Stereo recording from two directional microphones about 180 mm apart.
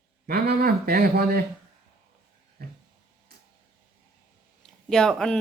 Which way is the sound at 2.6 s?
60° right (ahead or behind).